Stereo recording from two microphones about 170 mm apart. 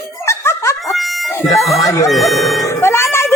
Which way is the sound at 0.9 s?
Centre (ahead or behind).